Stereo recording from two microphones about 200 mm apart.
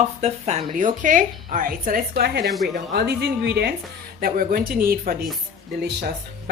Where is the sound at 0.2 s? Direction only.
35° right (ahead or behind).